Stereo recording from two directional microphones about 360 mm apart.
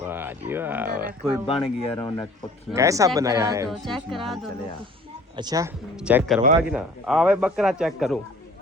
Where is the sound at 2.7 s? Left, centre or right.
Centre.